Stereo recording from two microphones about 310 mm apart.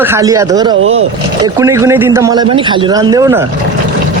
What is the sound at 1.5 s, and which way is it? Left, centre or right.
A man's voice, centre.